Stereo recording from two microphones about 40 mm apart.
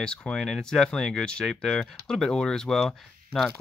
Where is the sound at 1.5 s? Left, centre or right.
Centre.